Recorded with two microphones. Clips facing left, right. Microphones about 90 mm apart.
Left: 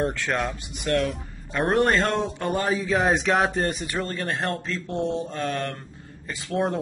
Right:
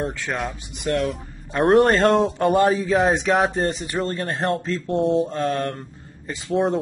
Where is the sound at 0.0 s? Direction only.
Centre (ahead or behind).